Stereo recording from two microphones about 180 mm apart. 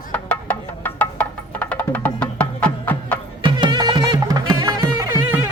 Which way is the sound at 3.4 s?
25° right (ahead or behind).